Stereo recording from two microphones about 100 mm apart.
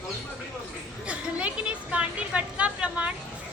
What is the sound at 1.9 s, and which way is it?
Speech, 15° right (ahead or behind).